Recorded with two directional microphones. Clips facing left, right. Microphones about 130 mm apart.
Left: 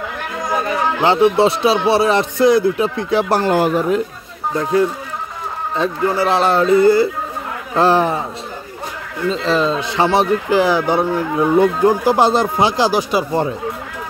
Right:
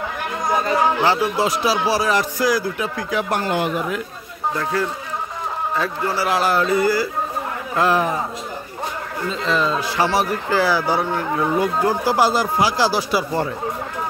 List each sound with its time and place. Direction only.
1.0 s speech: 25° left (ahead or behind)
5.8 s speech: 20° left (ahead or behind)
9.3 s speech: 30° left (ahead or behind)